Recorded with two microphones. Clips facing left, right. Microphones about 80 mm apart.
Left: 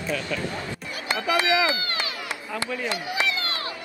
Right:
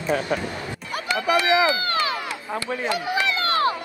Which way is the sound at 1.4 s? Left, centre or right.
Right.